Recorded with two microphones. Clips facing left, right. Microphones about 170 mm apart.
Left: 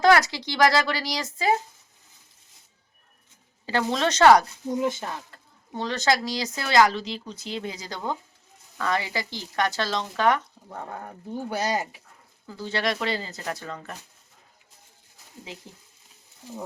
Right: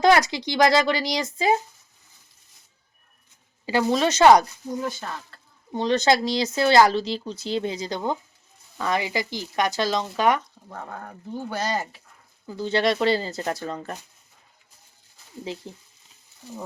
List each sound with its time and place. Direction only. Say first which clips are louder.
0.0 s speech: right 1 dB; 20° right (ahead or behind)
3.7 s speech: right 3 dB; 10° right (ahead or behind)
4.7 s speech: left 3 dB; 20° left (ahead or behind)
5.7 s speech: right 4 dB; 20° right (ahead or behind)
10.7 s speech: left 1 dB; 10° left (ahead or behind)
12.5 s speech: right 5 dB; 20° right (ahead or behind)